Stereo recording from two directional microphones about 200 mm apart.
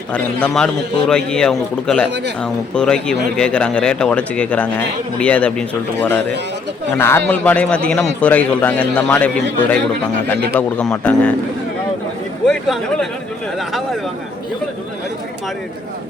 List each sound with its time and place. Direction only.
0.1 s speech: 5° left (ahead or behind)
2.0 s speech: 60° right (ahead or behind)
2.4 s a man's voice: 5° left (ahead or behind)
10.6 s a man's voice: 5° left (ahead or behind)
12.5 s speech: centre (ahead or behind)